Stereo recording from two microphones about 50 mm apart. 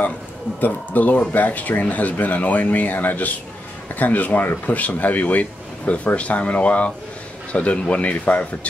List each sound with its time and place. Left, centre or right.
0.6 s speech: left